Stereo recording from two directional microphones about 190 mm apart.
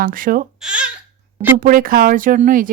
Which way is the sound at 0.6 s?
5° right (ahead or behind).